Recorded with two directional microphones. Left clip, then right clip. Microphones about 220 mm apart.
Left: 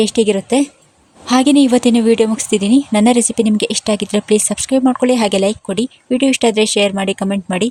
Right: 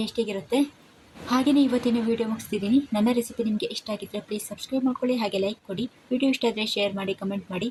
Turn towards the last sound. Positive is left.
turn(degrees=45)  # may be behind; listen again after turning